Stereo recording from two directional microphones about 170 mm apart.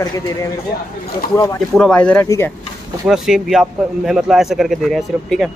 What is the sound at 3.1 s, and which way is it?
A man's voice, centre (ahead or behind).